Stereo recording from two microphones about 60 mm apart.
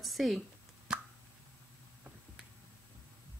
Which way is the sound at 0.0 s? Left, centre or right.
Centre.